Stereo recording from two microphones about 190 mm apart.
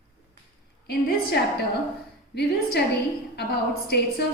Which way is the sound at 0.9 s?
60° left (ahead or behind).